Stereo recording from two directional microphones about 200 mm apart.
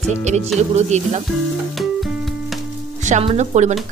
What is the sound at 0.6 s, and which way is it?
Speech, 35° right (ahead or behind).